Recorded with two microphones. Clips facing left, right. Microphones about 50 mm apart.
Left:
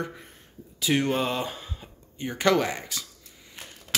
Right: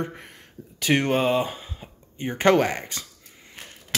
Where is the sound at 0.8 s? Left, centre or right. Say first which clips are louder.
Right 3 dB; right.